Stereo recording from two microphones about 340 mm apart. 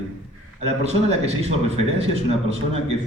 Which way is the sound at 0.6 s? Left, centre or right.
Centre.